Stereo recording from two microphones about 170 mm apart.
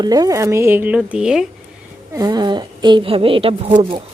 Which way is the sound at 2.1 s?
25° right (ahead or behind).